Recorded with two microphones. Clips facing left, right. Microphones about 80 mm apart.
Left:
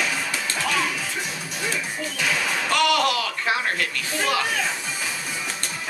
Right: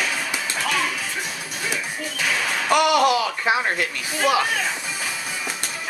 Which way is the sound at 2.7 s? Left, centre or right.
Centre.